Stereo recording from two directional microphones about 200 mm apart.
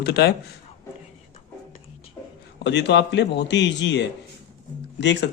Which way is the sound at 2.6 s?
60° left (ahead or behind).